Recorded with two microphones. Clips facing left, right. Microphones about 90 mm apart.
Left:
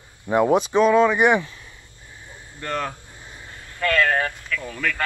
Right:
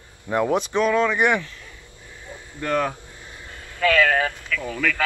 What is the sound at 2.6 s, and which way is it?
Speech, 5° right (ahead or behind).